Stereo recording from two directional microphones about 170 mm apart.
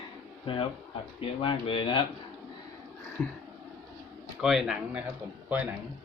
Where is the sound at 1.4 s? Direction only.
30° left (ahead or behind).